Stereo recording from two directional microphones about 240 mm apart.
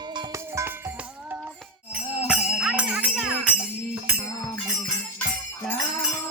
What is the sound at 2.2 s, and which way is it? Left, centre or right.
Music, centre.